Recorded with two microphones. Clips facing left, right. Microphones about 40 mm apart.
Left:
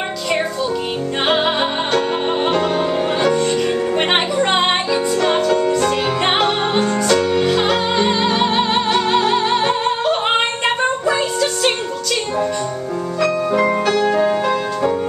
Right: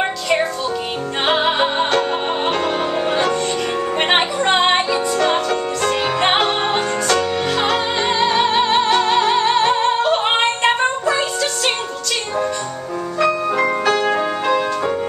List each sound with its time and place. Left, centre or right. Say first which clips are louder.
1.2 s music: right 1 dB; centre
13.2 s music: even; centre